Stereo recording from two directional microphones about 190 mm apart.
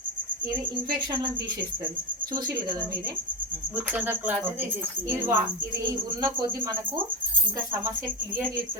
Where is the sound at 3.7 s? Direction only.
10° right (ahead or behind).